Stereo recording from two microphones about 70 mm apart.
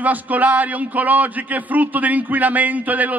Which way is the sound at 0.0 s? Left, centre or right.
Right.